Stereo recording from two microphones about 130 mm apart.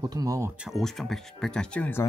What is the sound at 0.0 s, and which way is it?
Speech, 30° right (ahead or behind).